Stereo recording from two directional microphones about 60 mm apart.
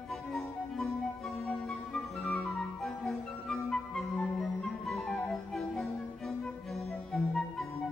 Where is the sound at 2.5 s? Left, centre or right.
Centre.